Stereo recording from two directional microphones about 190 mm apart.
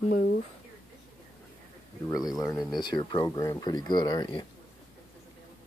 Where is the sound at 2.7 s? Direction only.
25° left (ahead or behind).